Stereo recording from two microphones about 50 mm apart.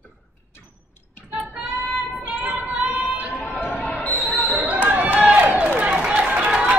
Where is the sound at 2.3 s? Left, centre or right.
Right.